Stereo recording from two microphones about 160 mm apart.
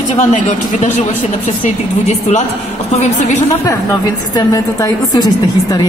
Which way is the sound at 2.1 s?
45° left (ahead or behind).